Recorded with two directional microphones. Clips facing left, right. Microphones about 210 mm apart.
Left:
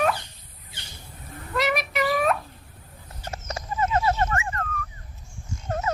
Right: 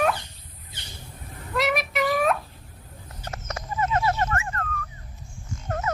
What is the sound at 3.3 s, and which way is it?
Horse, 25° left (ahead or behind).